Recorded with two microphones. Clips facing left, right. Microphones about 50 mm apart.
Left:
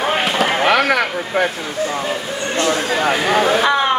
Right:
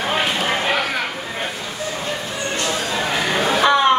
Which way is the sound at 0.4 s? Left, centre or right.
Left.